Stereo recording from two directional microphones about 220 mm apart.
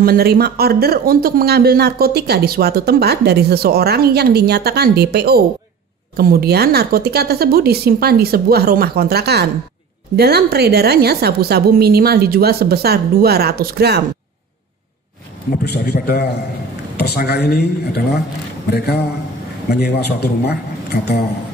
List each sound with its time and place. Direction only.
0.0 s speech: 45° right (ahead or behind)
15.6 s a man's voice: 45° left (ahead or behind)
19.7 s a man's voice: 45° left (ahead or behind)